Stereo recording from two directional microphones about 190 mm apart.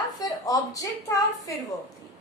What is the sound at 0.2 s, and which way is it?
A woman's voice, 20° left (ahead or behind).